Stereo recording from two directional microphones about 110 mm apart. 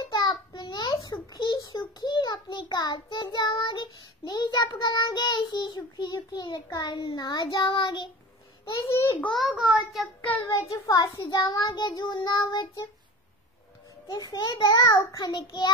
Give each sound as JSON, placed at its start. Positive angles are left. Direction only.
{"t": 0.0, "sound": "child singing", "side_deg": 40}
{"t": 8.8, "sound": "child singing", "side_deg": 30}
{"t": 9.3, "sound": "a child's voice", "side_deg": 0}
{"t": 10.3, "sound": "child singing", "side_deg": 25}
{"t": 11.3, "sound": "a child's voice", "side_deg": 40}
{"t": 14.1, "sound": "a child's voice", "side_deg": 40}